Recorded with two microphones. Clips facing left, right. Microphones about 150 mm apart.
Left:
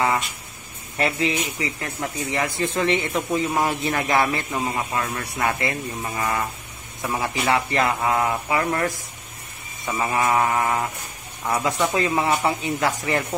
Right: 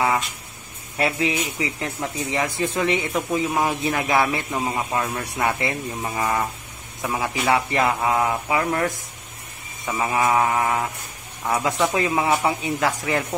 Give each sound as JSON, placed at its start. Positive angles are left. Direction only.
{"t": 0.9, "sound": "a man's voice", "side_deg": -10}
{"t": 9.8, "sound": "mantra", "side_deg": -5}
{"t": 11.4, "sound": "a man's voice", "side_deg": -10}